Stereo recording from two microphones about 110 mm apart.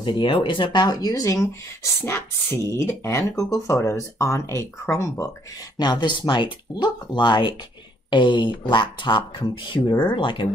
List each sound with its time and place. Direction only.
0.0 s speech: 50° left (ahead or behind); by 5.3 s 25° left (ahead or behind)
5.8 s speech: 40° left (ahead or behind)